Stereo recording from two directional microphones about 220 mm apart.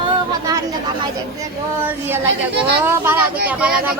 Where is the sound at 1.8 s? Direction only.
10° right (ahead or behind).